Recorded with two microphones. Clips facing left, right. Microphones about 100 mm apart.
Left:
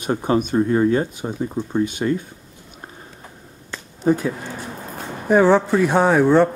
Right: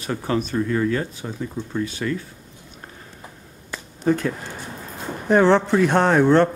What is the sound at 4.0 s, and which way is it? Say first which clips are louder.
Speech: left 2 dB; 10° left (ahead or behind).